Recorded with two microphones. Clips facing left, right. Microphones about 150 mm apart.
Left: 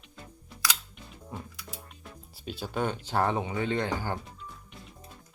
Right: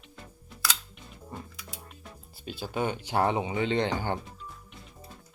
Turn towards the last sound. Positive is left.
turn(degrees=-25)  # may be behind; listen again after turning